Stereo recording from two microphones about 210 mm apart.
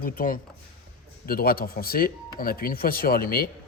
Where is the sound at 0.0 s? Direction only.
40° left (ahead or behind).